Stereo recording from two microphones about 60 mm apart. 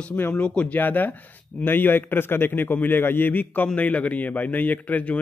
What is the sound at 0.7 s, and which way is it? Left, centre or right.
A man's voice, left.